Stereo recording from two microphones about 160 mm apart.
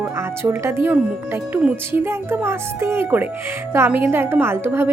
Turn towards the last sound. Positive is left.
turn(degrees=-15)  # may be behind; listen again after turning